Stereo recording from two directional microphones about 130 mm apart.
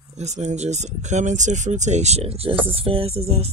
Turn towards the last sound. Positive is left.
turn(degrees=-50)  # may be behind; listen again after turning